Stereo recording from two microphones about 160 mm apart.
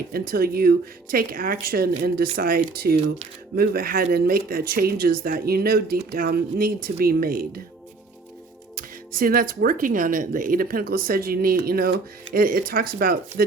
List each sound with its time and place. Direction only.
0.1 s speech: 70° right (ahead or behind)
8.7 s speech: 65° right (ahead or behind)